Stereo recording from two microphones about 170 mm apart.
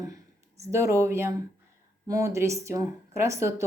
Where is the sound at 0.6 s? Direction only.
20° right (ahead or behind).